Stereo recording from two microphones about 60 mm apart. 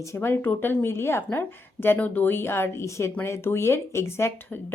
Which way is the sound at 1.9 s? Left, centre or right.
Left.